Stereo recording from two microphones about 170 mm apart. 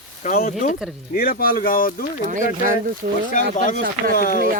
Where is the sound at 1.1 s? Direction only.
60° left (ahead or behind).